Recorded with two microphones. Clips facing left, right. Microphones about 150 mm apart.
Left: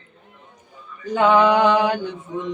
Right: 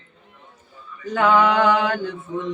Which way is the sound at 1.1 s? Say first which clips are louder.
Left 2 dB; 15° left (ahead or behind).